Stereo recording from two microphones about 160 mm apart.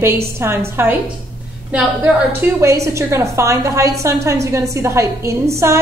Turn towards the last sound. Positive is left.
turn(degrees=-15)  # may be behind; listen again after turning